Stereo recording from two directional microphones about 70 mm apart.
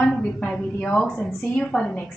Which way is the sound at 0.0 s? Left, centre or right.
Centre.